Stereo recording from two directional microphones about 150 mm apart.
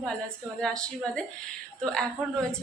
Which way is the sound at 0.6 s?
5° left (ahead or behind).